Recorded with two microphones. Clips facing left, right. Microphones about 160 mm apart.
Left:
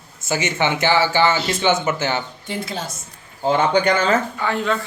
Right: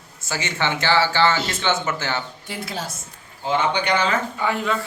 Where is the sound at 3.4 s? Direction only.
45° left (ahead or behind).